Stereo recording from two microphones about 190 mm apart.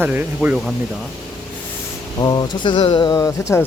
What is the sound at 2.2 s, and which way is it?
Speech, 20° left (ahead or behind).